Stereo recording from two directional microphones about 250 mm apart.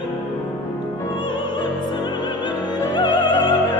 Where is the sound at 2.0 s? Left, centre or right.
Centre.